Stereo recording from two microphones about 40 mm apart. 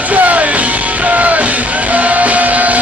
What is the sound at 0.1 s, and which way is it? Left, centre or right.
Music, right.